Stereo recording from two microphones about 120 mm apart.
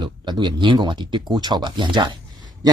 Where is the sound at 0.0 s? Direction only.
40° right (ahead or behind).